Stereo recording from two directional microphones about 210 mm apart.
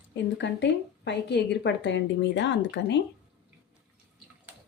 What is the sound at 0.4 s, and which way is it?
A woman's voice, 55° left (ahead or behind).